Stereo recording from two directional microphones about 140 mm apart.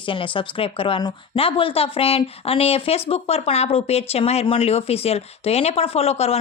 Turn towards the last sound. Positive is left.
turn(degrees=45)  # may be behind; listen again after turning